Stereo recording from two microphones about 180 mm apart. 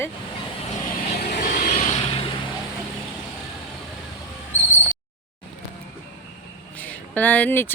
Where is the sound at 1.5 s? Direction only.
45° left (ahead or behind).